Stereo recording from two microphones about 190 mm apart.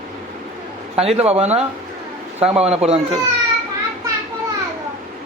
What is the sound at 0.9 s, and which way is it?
A man's voice, 30° right (ahead or behind).